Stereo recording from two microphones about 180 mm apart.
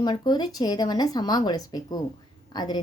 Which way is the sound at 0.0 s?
25° left (ahead or behind).